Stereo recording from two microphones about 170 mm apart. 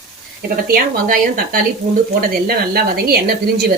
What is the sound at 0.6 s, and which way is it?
A woman's voice, 55° right (ahead or behind).